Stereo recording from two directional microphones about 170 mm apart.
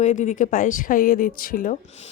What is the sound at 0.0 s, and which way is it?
Speech, 45° left (ahead or behind).